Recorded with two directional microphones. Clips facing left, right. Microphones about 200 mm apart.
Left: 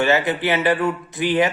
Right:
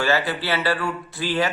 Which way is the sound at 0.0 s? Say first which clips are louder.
Left 4 dB; 20° left (ahead or behind).